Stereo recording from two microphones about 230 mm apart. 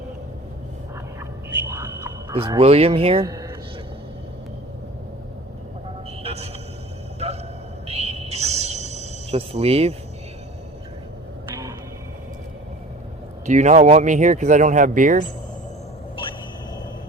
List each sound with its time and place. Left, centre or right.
1.7 s a sound: centre
2.3 s speech: right
6.2 s vehicle: right
7.2 s a sound: right
7.9 s music: right
13.4 s speech: right